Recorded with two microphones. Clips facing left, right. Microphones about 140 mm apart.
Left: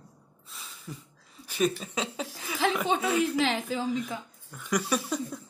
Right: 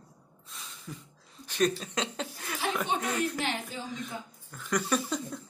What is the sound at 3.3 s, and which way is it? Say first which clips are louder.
Speech: left 6 dB; 90° left.